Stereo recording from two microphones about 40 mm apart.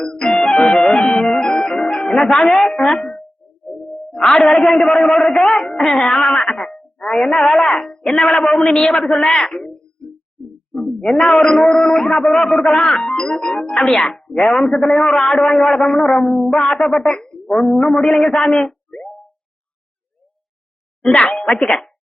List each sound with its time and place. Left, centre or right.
0.3 s music: centre
2.1 s a man's voice: centre
2.7 s music: centre
3.8 s a man's voice: centre
11.2 s a man's voice: centre
16.0 s music: centre
16.6 s speech: centre
17.5 s a man's voice: centre
18.7 s a sound: left
21.0 s speech: left